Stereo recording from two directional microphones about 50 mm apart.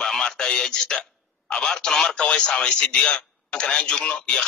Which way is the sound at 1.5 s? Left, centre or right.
Centre.